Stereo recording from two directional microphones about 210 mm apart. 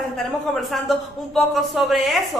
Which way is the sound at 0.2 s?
Centre (ahead or behind).